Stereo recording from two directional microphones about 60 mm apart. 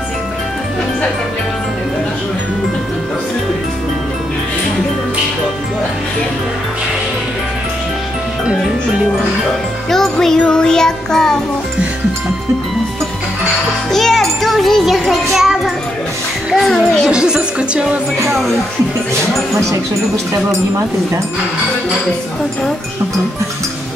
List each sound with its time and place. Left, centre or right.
9.8 s music: centre
13.9 s music: centre
16.5 s a child's voice: centre
17.1 s speech: centre